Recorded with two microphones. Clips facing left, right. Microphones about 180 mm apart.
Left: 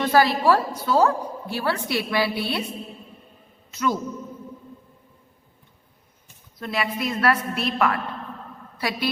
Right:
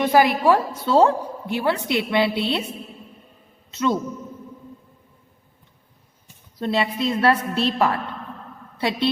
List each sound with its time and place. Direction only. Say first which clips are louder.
0.0 s a woman's voice: right 2 dB; 15° right (ahead or behind)
3.7 s a man's voice: right 3 dB; 25° right (ahead or behind)
6.6 s a woman's voice: right 4 dB; 30° right (ahead or behind)